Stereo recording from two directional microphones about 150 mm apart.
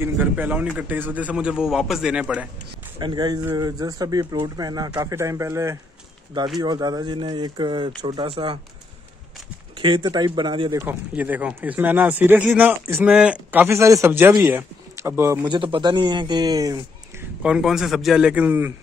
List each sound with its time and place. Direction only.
0.0 s speech: 10° right (ahead or behind)
3.0 s speech: 30° right (ahead or behind)
9.8 s speech: 30° right (ahead or behind)
10.8 s speech: 15° right (ahead or behind)
15.4 s speech: 35° right (ahead or behind)
17.4 s a man's voice: 5° right (ahead or behind)